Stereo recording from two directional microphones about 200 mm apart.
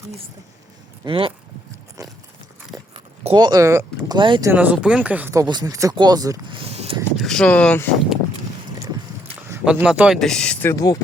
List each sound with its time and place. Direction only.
1.0 s speech: 25° right (ahead or behind)
2.7 s a sound: 25° right (ahead or behind)
4.5 s speech: 5° right (ahead or behind); by 7.0 s 30° right (ahead or behind)
7.2 s speech: 5° left (ahead or behind)
9.5 s speech: 5° right (ahead or behind); by 10.9 s 15° left (ahead or behind)